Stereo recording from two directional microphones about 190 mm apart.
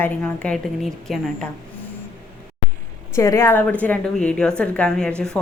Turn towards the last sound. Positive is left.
turn(degrees=5)  # may be behind; listen again after turning